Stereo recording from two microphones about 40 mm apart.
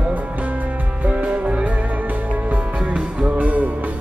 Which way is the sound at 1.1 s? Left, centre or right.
Right.